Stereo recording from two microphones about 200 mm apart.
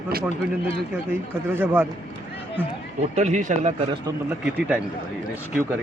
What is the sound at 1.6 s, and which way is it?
Speech, 10° right (ahead or behind).